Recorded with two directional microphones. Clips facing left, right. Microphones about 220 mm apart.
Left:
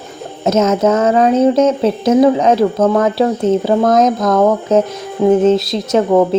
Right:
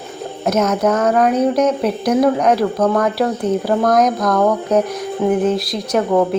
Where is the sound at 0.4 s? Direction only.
25° left (ahead or behind).